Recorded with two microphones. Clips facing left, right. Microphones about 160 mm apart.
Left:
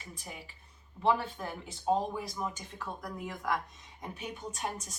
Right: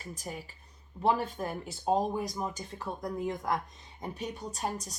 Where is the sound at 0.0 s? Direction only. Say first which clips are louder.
Right 6 dB; 40° right (ahead or behind).